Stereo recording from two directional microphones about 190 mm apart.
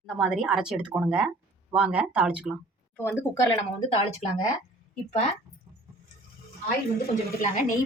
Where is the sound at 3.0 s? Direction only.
15° left (ahead or behind).